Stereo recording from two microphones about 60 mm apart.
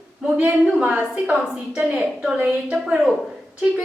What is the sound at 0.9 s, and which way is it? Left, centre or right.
A woman's voice, centre.